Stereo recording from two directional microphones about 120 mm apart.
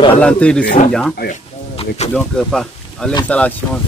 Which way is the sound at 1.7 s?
55° left (ahead or behind).